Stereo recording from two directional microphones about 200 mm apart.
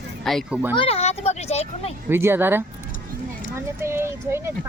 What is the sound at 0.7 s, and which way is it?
A child's voice, 30° left (ahead or behind).